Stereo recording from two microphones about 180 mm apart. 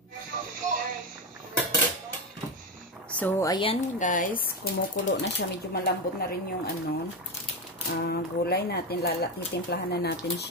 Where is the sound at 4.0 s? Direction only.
45° left (ahead or behind).